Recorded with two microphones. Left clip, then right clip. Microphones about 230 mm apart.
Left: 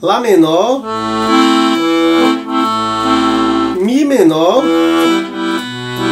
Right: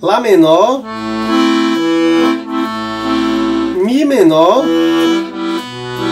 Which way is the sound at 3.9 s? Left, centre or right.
Centre.